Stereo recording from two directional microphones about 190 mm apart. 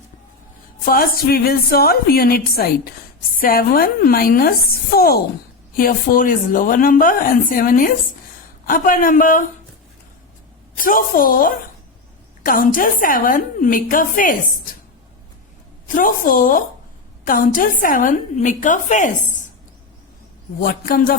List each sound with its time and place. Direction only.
0.9 s speech: 50° left (ahead or behind)
10.8 s speech: 45° left (ahead or behind)
16.0 s speech: 45° left (ahead or behind)
20.6 s speech: 50° left (ahead or behind)